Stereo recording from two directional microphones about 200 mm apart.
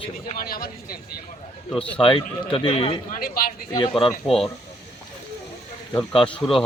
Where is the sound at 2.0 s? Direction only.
25° left (ahead or behind).